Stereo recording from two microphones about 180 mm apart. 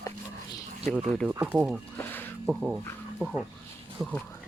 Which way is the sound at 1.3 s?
10° right (ahead or behind).